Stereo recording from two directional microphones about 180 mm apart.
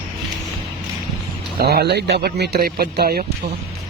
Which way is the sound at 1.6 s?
60° right (ahead or behind).